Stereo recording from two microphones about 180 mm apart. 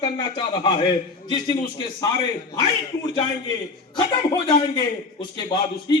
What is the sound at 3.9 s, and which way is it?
Speech, 25° left (ahead or behind).